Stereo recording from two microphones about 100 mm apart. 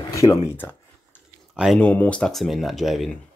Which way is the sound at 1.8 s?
15° left (ahead or behind).